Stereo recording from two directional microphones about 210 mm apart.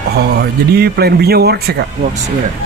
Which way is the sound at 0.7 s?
50° right (ahead or behind).